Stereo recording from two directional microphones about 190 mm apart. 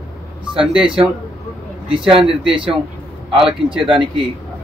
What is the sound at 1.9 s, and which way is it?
Speech, 30° right (ahead or behind).